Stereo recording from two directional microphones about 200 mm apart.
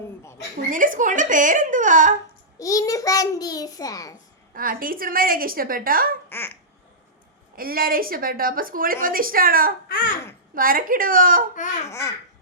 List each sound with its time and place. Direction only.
0.7 s speech: 40° right (ahead or behind)
2.6 s a child's voice: 15° left (ahead or behind)
4.5 s speech: 45° right (ahead or behind)
6.2 s babbling: 10° left (ahead or behind)
7.5 s speech: 45° right (ahead or behind)
9.9 s speech: 45° left (ahead or behind)
10.5 s speech: 45° right (ahead or behind)
11.5 s speech: 40° left (ahead or behind)
11.9 s a child's voice: 15° left (ahead or behind)